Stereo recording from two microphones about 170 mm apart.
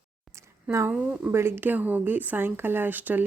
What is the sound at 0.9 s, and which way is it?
Speech, 5° right (ahead or behind).